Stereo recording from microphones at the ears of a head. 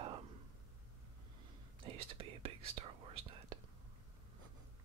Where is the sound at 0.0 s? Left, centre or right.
Right.